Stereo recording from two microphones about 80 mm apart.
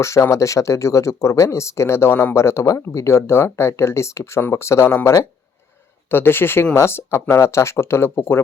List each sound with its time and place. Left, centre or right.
0.0 s speech: left
6.1 s speech: left